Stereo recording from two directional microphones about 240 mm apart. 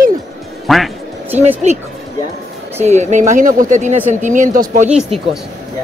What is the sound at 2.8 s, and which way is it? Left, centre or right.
A man's voice, right.